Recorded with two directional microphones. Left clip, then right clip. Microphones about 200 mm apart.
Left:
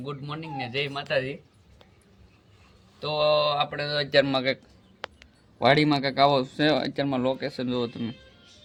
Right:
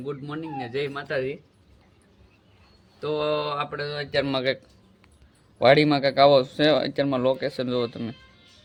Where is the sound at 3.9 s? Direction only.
45° left (ahead or behind).